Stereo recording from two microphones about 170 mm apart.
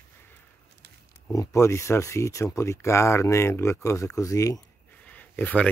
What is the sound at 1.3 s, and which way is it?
Speech, 15° left (ahead or behind).